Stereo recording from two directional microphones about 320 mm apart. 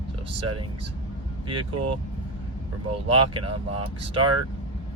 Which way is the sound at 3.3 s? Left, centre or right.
Centre.